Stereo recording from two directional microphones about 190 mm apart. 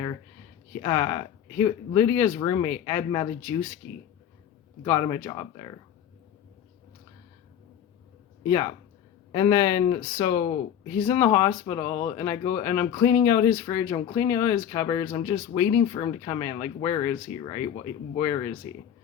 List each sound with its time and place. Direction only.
0.8 s speech: 20° left (ahead or behind)
4.8 s speech: 20° left (ahead or behind)
8.4 s speech: 20° left (ahead or behind)